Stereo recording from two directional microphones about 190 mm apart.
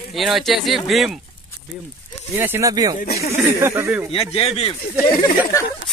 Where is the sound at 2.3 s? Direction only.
10° right (ahead or behind).